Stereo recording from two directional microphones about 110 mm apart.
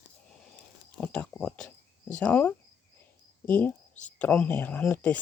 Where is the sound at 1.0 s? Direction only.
10° left (ahead or behind).